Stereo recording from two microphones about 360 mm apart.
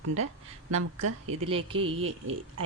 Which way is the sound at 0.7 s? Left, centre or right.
Right.